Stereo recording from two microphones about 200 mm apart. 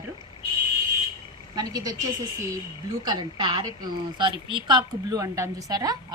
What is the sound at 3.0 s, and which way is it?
A woman's voice, 20° right (ahead or behind).